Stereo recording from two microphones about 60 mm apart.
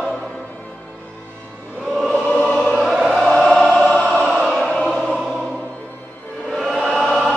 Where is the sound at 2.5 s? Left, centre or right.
Centre.